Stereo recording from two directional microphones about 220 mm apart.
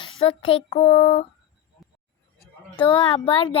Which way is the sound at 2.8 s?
20° left (ahead or behind).